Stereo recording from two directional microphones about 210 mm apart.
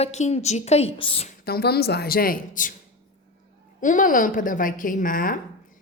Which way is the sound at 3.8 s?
40° left (ahead or behind).